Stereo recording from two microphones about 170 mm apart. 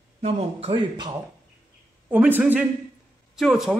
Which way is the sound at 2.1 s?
10° right (ahead or behind).